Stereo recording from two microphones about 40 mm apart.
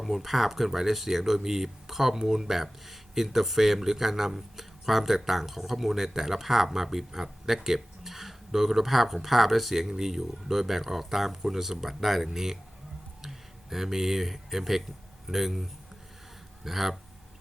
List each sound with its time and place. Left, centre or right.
0.0 s speech: centre